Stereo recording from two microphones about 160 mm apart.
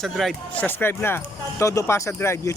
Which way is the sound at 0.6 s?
15° left (ahead or behind).